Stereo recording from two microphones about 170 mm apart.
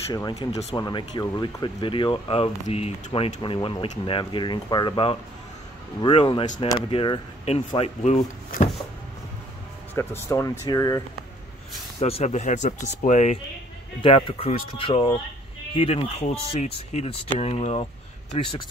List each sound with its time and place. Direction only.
0.1 s speech: 20° left (ahead or behind)
0.5 s speech: 40° left (ahead or behind)
0.7 s speech: 25° left (ahead or behind); by 8.6 s 50° left (ahead or behind)
9.9 s speech: 15° left (ahead or behind)
12.0 s speech: 40° left (ahead or behind)
14.0 s speech: 35° left (ahead or behind)